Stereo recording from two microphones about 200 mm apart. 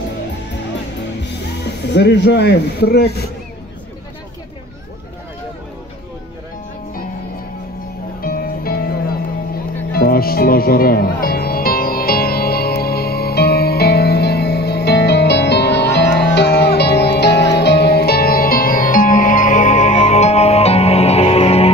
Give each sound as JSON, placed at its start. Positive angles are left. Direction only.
{"t": 1.2, "sound": "speech", "side_deg": 60}
{"t": 8.2, "sound": "music", "side_deg": 45}